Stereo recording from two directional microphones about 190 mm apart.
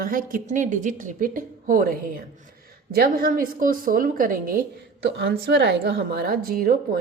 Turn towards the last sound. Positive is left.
turn(degrees=-50)  # may be behind; listen again after turning